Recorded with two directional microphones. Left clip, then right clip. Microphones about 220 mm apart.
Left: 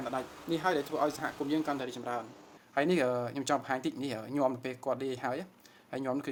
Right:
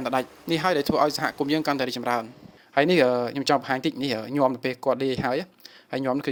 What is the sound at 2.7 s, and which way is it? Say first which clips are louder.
A man's voice: right 9 dB; 35° right (ahead or behind).